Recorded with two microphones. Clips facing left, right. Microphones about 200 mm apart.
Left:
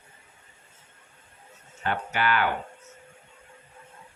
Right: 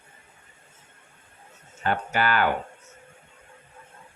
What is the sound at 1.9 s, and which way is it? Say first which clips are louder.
Speech: right 2 dB; 40° right (ahead or behind).